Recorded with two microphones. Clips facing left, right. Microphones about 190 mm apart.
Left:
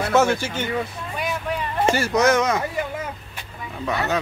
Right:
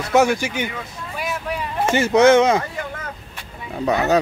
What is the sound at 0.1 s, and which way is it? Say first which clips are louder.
Speech: right 4 dB; 15° right (ahead or behind).